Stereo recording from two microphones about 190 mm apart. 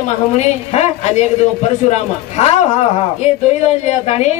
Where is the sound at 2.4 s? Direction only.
35° left (ahead or behind).